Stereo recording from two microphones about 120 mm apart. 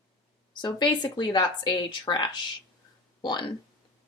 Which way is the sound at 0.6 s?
35° left (ahead or behind).